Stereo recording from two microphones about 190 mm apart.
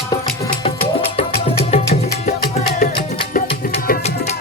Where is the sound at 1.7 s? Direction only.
30° left (ahead or behind).